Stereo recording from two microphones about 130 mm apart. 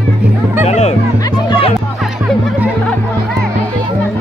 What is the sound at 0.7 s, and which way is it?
Speech, 55° left (ahead or behind).